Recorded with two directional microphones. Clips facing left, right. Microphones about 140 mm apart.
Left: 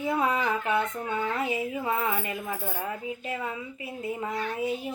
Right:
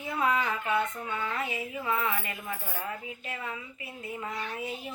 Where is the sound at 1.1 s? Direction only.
30° left (ahead or behind).